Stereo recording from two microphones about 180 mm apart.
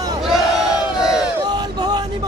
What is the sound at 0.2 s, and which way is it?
Battle cry, centre (ahead or behind).